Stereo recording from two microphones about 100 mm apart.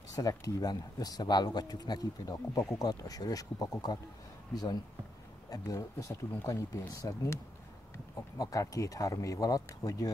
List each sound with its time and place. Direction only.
0.1 s speech: 40° left (ahead or behind)
8.4 s speech: 35° left (ahead or behind)